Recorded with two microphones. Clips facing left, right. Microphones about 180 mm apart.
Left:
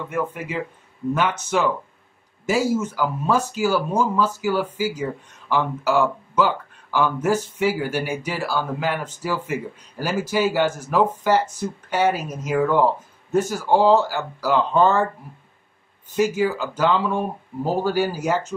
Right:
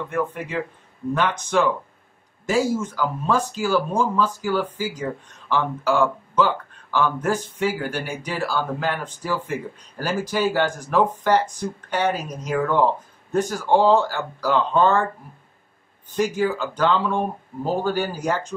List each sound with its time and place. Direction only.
0.1 s speech: 5° left (ahead or behind)
16.2 s speech: 5° left (ahead or behind)